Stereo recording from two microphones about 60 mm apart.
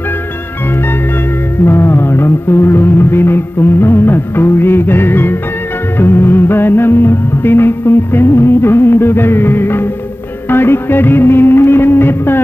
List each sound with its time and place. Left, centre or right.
1.7 s music: left